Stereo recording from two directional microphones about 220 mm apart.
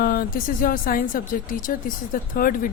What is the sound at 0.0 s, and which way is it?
A woman's voice, 45° left (ahead or behind).